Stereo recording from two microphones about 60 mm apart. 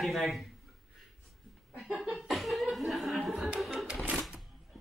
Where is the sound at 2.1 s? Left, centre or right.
Centre.